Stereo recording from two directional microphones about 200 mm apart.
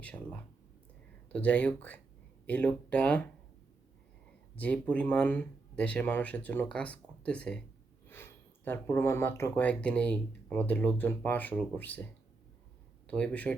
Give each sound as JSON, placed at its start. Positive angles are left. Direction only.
{"t": 0.0, "sound": "speech", "side_deg": 5}
{"t": 4.5, "sound": "speech", "side_deg": 5}
{"t": 13.1, "sound": "speech", "side_deg": 5}